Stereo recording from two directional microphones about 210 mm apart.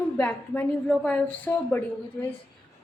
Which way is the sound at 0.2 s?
5° left (ahead or behind).